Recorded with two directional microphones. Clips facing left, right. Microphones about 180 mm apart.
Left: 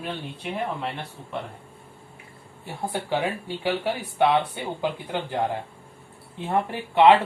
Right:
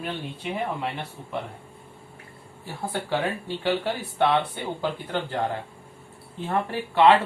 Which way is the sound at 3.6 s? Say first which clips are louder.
Even; 10° left (ahead or behind).